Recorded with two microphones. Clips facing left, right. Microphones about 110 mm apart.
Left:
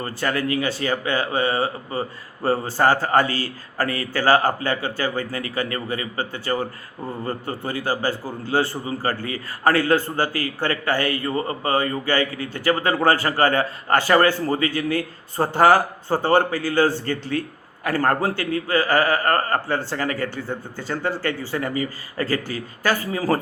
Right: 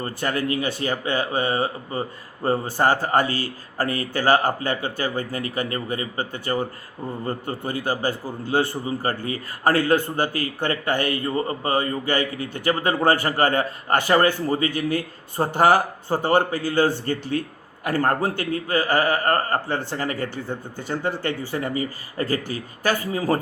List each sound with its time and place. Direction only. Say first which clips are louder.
0.2 s speech: left 2 dB; 20° right (ahead or behind)
1.9 s a man's voice: left 1 dB; 35° left (ahead or behind)
2.5 s speech: left 1 dB; 15° right (ahead or behind)
11.3 s a man's voice: even; 25° left (ahead or behind)
11.7 s speech: left 2 dB; 20° right (ahead or behind)
18.9 s a man's voice: left 1 dB; 40° left (ahead or behind)
19.3 s speech: left 1 dB; 20° right (ahead or behind)